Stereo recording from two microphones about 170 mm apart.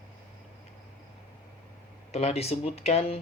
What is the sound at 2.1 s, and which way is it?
Speech, 40° left (ahead or behind).